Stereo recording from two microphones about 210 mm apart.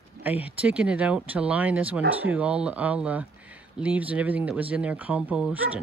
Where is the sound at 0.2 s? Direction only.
5° right (ahead or behind).